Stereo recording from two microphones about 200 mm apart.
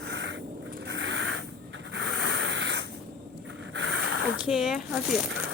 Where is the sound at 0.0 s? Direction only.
60° right (ahead or behind).